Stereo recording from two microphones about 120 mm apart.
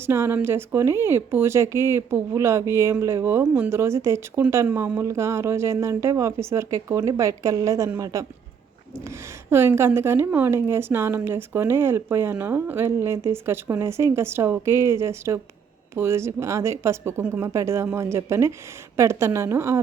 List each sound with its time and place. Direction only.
0.0 s a woman's voice: 20° right (ahead or behind)